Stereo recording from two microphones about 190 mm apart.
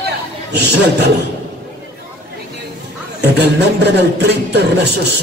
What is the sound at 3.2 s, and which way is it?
Speech, 60° right (ahead or behind).